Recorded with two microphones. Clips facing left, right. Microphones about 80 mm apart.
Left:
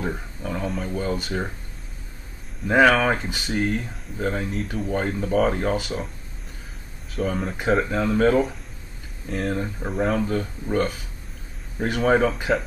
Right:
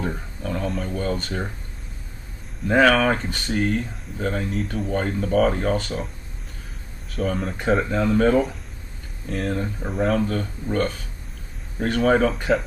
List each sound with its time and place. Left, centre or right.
0.0 s speech: centre
2.6 s speech: centre
7.1 s speech: centre